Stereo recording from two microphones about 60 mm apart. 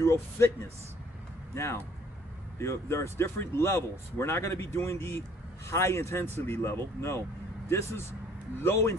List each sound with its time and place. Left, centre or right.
0.0 s speech: left